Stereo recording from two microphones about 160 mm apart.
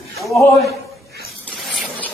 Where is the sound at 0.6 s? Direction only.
80° right.